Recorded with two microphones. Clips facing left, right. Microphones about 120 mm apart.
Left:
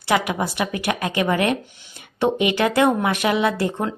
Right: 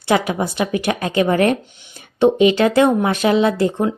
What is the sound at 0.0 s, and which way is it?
Speech, 25° right (ahead or behind).